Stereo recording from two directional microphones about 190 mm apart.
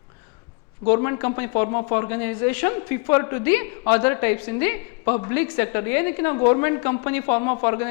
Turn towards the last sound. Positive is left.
turn(degrees=15)  # may be behind; listen again after turning